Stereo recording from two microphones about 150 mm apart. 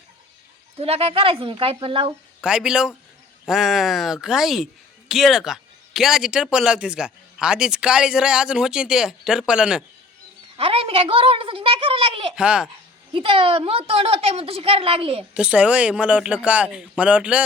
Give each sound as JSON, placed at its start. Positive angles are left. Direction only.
{"t": 0.8, "sound": "a woman's voice", "side_deg": -40}
{"t": 2.4, "sound": "speech", "side_deg": -5}
{"t": 10.6, "sound": "a woman's voice", "side_deg": -40}
{"t": 12.4, "sound": "speech", "side_deg": -5}
{"t": 13.1, "sound": "a woman's voice", "side_deg": -35}
{"t": 15.4, "sound": "speech", "side_deg": -10}